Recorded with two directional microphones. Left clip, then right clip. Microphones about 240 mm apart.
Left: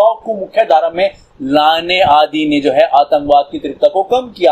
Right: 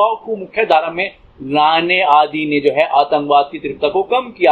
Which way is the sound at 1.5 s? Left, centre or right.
Left.